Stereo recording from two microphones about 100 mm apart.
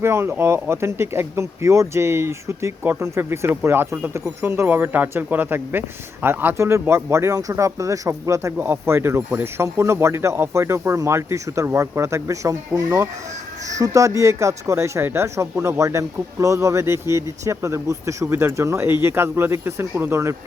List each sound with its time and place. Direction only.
0.0 s speech: 25° right (ahead or behind)